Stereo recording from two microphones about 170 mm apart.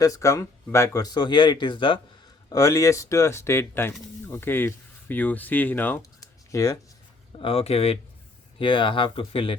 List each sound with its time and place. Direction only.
0.0 s speech: 20° left (ahead or behind)
7.3 s speech: 35° left (ahead or behind)